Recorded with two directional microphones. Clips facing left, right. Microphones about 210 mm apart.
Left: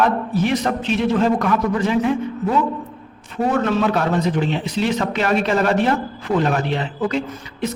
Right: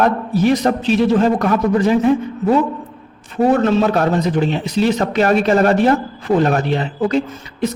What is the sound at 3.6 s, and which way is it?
Speech, 25° right (ahead or behind).